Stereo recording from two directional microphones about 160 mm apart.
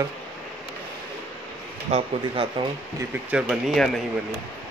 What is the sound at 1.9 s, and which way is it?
Speech, 40° right (ahead or behind).